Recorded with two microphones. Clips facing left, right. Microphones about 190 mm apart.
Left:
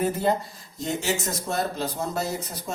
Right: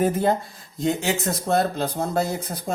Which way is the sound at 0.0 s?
50° right (ahead or behind).